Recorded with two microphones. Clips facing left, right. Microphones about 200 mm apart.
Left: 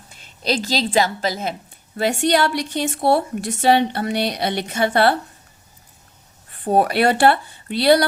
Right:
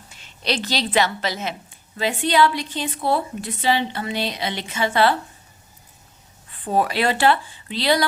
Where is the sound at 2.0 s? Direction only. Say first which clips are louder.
Left 1 dB; 70° left (ahead or behind).